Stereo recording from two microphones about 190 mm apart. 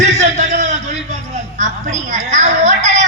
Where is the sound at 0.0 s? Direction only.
35° right (ahead or behind).